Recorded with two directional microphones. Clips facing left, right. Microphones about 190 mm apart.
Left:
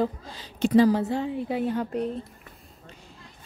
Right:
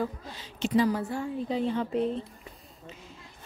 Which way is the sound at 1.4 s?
5° left (ahead or behind).